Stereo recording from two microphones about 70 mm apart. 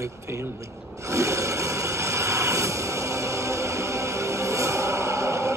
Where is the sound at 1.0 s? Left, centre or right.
Right.